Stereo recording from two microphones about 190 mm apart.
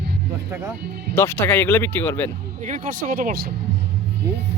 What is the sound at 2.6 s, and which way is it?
Speech, 40° right (ahead or behind).